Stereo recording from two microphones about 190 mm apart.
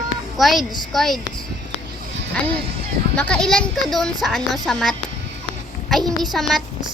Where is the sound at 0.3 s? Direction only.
Centre (ahead or behind).